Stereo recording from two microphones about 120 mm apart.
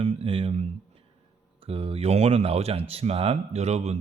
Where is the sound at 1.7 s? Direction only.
50° right (ahead or behind).